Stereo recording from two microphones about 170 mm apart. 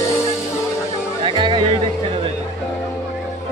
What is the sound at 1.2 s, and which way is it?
Music, 30° right (ahead or behind).